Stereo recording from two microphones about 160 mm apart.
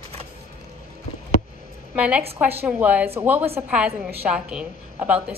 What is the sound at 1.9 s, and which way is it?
A woman's voice, 10° right (ahead or behind).